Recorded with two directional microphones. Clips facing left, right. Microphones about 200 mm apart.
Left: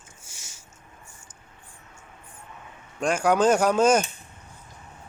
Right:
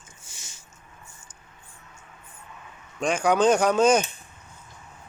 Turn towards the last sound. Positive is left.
turn(degrees=5)  # may be behind; listen again after turning